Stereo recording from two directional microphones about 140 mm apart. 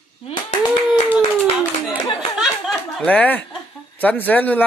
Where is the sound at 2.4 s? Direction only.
5° left (ahead or behind).